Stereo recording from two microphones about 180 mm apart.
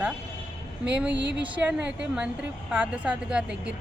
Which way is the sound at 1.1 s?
75° right (ahead or behind).